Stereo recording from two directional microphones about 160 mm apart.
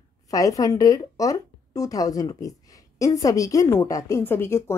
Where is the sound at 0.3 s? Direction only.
20° left (ahead or behind).